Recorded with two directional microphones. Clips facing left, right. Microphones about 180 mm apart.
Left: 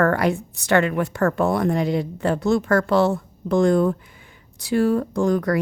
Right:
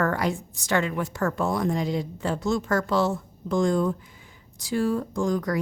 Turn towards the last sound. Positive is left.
turn(degrees=65)  # may be behind; listen again after turning